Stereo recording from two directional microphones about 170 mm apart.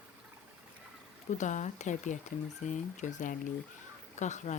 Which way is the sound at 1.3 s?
45° left (ahead or behind).